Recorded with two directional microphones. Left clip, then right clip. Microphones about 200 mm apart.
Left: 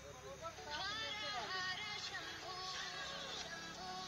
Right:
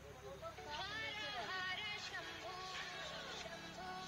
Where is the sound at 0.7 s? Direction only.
30° right (ahead or behind).